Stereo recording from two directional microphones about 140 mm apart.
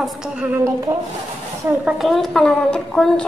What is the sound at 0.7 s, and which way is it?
Speech, 20° right (ahead or behind).